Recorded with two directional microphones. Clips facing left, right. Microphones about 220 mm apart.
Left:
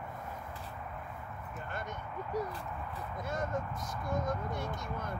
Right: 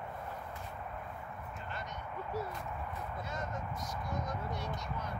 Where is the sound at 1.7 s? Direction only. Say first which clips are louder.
Left 4 dB; 50° left (ahead or behind).